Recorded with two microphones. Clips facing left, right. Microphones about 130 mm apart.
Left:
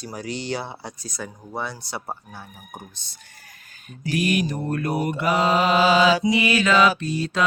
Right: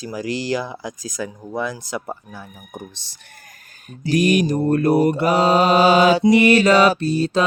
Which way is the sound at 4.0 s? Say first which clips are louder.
Right 6 dB; 35° right (ahead or behind).